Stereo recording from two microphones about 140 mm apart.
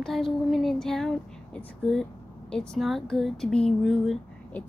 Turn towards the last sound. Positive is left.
turn(degrees=0)  # may be behind; listen again after turning